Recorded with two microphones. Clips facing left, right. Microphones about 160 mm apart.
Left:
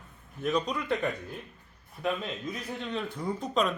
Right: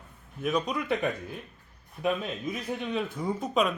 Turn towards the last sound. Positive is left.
turn(degrees=-5)  # may be behind; listen again after turning